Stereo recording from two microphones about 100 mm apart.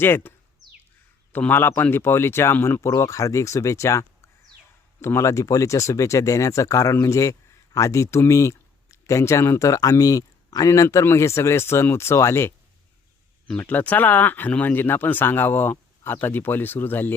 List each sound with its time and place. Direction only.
0.0 s speech: 20° left (ahead or behind)
13.6 s speech: 15° left (ahead or behind)